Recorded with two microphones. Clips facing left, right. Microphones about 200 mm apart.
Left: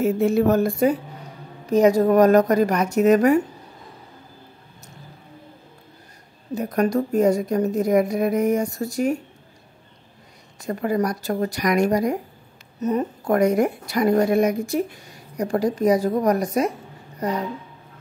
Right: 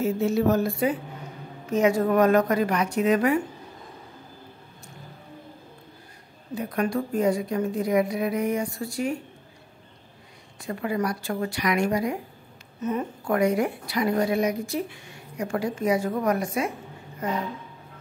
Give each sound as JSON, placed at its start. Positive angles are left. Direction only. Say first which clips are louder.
{"t": 0.0, "sound": "a woman's voice", "louder": "left 4 dB", "side_deg": 55}
{"t": 6.5, "sound": "a woman's voice", "louder": "left 5 dB", "side_deg": 40}
{"t": 10.6, "sound": "a woman's voice", "louder": "left 5 dB", "side_deg": 40}